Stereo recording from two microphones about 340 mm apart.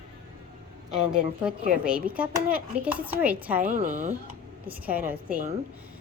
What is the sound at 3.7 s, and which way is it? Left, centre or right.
Speech, right.